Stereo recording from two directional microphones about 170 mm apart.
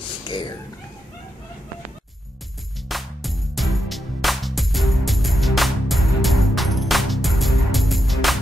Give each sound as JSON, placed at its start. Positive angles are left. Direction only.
{"t": 0.3, "sound": "speech", "side_deg": 25}
{"t": 2.9, "sound": "music", "side_deg": 0}